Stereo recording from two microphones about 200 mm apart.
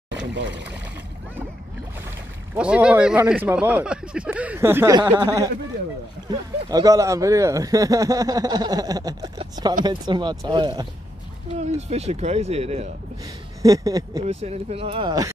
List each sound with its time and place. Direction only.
0.1 s pour: 65° right (ahead or behind)
2.5 s speech: 5° right (ahead or behind); by 10.9 s 20° right (ahead or behind)
11.5 s speech: 35° right (ahead or behind)
13.6 s speech: 15° right (ahead or behind)
14.2 s speech: 30° right (ahead or behind)